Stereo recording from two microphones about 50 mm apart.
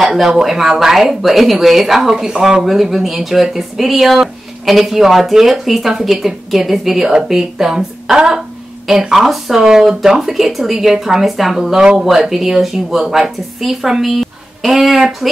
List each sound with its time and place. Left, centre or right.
0.0 s a sound: centre
0.4 s speech: centre
2.6 s speech: centre